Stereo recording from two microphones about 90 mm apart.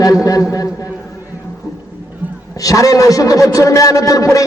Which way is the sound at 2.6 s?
40° left (ahead or behind).